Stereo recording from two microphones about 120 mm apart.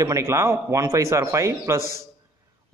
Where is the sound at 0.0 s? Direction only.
25° right (ahead or behind).